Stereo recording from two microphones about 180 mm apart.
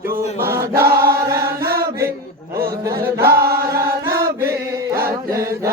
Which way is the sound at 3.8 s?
15° right (ahead or behind).